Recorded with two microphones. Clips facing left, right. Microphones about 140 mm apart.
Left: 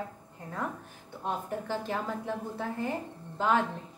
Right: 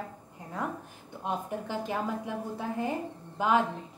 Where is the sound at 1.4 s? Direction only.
15° right (ahead or behind).